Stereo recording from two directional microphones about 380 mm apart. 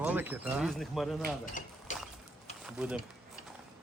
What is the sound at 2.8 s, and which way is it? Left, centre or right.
Speech, centre.